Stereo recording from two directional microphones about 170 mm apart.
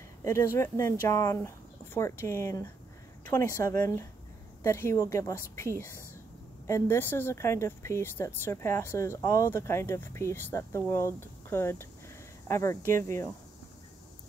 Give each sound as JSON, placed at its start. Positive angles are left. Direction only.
{"t": 0.2, "sound": "speech", "side_deg": 15}